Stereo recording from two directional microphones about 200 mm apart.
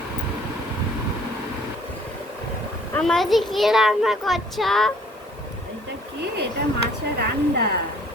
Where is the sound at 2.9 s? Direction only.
5° left (ahead or behind).